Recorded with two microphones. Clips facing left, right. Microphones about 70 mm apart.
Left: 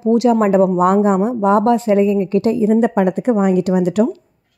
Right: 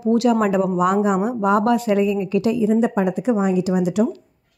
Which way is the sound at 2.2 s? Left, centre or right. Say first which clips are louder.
Left 4 dB; left.